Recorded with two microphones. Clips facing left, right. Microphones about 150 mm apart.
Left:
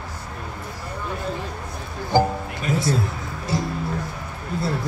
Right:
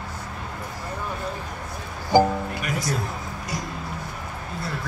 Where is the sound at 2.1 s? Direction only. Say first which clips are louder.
Right 2 dB; 15° right (ahead or behind).